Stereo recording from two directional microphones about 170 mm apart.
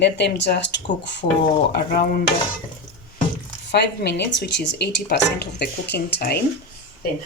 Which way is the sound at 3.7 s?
85° left.